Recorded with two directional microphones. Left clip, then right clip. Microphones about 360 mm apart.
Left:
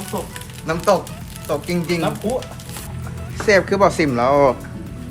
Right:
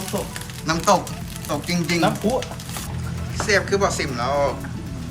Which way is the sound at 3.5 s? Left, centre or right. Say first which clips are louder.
Left 5 dB; centre.